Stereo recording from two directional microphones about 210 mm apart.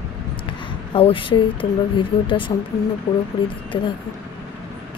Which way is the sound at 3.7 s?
20° left (ahead or behind).